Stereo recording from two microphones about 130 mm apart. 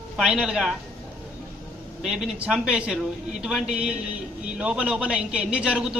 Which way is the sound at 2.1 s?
5° right (ahead or behind).